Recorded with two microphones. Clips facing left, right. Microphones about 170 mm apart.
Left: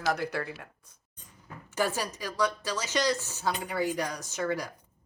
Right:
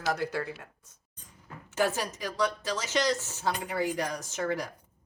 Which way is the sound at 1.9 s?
25° right (ahead or behind).